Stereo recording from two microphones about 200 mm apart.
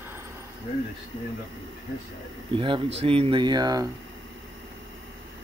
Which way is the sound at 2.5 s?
25° right (ahead or behind).